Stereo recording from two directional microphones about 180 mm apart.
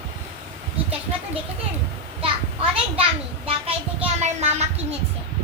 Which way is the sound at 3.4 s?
35° right (ahead or behind).